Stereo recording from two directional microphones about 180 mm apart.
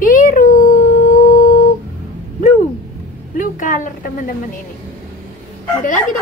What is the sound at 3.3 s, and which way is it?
A woman's voice, 50° left (ahead or behind).